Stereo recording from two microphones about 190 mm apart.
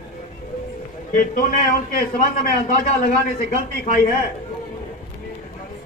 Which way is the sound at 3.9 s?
45° left (ahead or behind).